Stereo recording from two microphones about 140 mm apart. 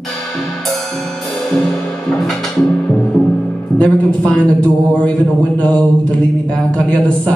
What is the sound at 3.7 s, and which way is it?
Speech, 10° left (ahead or behind).